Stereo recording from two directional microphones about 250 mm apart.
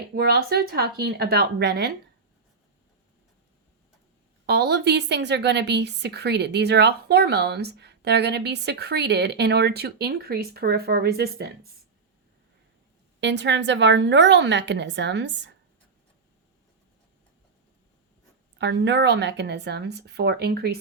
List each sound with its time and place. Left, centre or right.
0.1 s a woman's voice: right
4.4 s a woman's voice: right
13.1 s a woman's voice: right
18.6 s a woman's voice: right